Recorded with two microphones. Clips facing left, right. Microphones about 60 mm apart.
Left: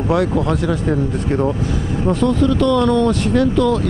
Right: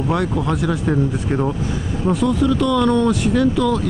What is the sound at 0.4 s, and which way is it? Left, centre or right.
Speech, centre.